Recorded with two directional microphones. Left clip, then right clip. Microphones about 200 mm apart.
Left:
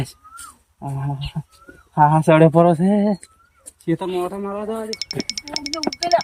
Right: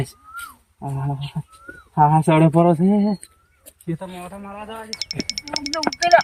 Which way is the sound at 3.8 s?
50° left (ahead or behind).